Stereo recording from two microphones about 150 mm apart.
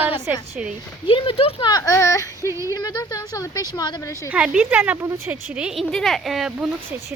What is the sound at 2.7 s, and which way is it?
Speech, 25° left (ahead or behind).